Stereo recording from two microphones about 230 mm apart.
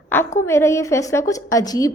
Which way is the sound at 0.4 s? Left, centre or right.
Centre.